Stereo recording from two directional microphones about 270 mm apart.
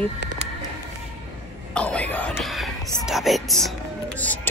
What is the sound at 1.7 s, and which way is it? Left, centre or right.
Speech, centre.